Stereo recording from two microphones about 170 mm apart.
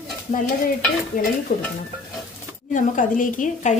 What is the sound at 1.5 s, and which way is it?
Stir, 65° left (ahead or behind).